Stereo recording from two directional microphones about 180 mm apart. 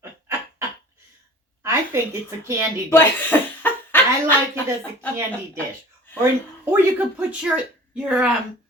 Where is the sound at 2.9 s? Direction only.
10° left (ahead or behind).